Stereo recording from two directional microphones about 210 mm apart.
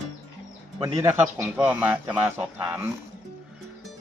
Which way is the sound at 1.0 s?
10° right (ahead or behind).